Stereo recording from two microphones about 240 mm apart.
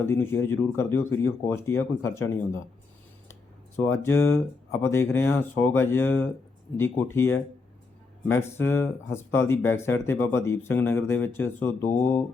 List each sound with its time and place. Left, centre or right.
0.0 s speech: centre
3.8 s speech: centre